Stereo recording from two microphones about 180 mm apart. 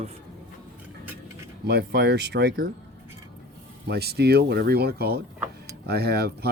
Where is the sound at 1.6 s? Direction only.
65° right (ahead or behind).